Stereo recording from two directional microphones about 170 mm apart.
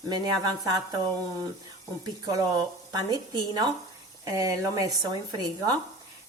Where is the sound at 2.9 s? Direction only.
25° right (ahead or behind).